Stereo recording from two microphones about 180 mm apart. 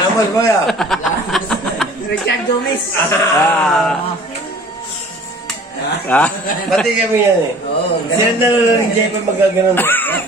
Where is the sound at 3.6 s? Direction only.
5° left (ahead or behind).